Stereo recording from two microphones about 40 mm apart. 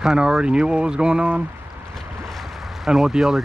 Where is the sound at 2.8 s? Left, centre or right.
Centre.